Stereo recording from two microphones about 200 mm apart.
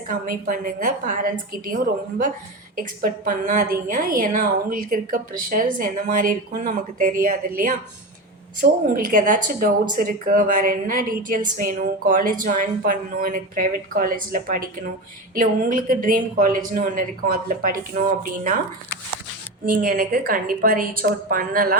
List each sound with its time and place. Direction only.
0.1 s a woman's voice: 40° right (ahead or behind)
19.7 s a woman's voice: 45° right (ahead or behind)